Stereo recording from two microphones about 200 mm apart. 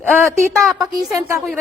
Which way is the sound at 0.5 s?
Centre (ahead or behind).